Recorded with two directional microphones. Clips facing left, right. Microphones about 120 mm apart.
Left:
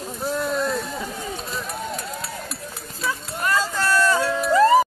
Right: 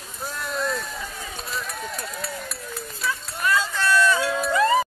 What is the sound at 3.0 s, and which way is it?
Run, 25° left (ahead or behind).